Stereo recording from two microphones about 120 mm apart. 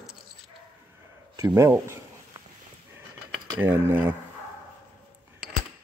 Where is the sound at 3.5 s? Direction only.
20° right (ahead or behind).